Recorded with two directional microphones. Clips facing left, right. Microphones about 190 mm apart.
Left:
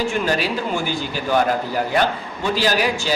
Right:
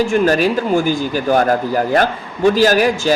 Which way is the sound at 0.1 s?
45° right (ahead or behind).